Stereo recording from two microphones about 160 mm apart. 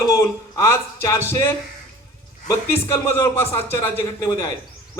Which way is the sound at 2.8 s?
15° left (ahead or behind).